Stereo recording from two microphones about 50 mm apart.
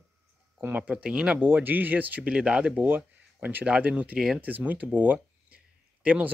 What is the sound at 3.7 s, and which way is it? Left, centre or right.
Speech, right.